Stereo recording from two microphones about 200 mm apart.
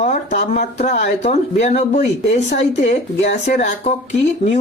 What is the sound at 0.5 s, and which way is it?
Speech, 35° left (ahead or behind).